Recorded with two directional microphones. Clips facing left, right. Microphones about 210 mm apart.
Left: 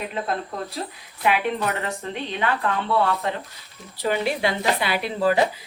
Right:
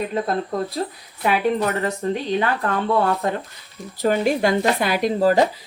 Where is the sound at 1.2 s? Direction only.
40° right (ahead or behind).